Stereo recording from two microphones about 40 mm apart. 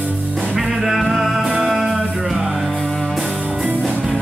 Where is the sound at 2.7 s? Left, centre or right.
Centre.